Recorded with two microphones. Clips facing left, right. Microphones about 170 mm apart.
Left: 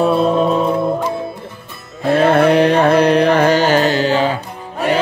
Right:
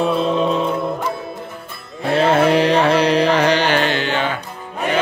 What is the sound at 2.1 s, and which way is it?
Carnatic music, 55° left (ahead or behind).